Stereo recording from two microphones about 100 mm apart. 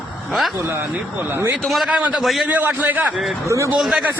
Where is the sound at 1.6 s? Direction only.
Centre (ahead or behind).